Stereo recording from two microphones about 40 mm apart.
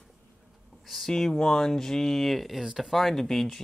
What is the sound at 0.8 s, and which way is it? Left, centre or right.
Speech, centre.